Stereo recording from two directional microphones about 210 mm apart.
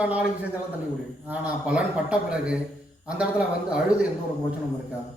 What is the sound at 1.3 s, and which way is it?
A man's voice, 5° right (ahead or behind).